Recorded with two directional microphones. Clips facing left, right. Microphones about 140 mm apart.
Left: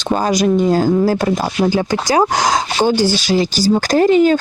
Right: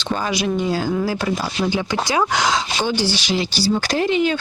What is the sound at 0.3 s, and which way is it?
Speech, 45° left (ahead or behind).